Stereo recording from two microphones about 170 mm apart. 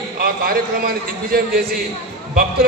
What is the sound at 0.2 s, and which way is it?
A man's voice, 60° right (ahead or behind).